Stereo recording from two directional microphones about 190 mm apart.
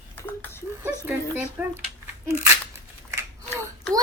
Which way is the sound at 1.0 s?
10° right (ahead or behind).